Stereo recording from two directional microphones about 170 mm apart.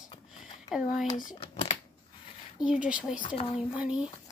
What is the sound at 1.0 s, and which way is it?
Speech, 50° left (ahead or behind).